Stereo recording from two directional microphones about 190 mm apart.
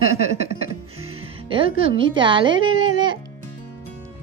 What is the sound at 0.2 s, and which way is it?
Music, 35° right (ahead or behind).